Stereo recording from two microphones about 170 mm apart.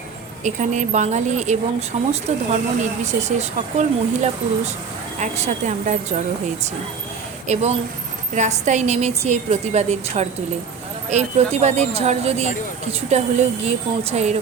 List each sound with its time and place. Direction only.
0.4 s speech: 45° right (ahead or behind)
7.4 s a woman's voice: 40° right (ahead or behind)